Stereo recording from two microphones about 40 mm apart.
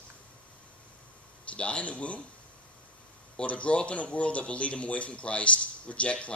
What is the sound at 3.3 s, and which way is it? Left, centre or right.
Speech, left.